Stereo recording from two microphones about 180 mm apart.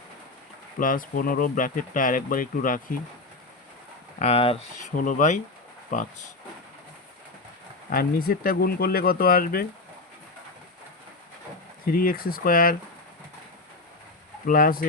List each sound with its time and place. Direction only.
0.8 s speech: 50° left (ahead or behind)
4.2 s speech: 35° left (ahead or behind)
4.9 s speech: 45° left (ahead or behind)
7.9 s speech: 55° left (ahead or behind)
11.9 s speech: 55° left (ahead or behind)
14.4 s speech: 50° left (ahead or behind)